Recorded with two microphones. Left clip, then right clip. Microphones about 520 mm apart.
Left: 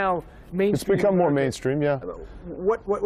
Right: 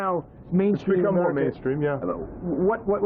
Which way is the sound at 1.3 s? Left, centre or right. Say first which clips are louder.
Left 1 dB; left.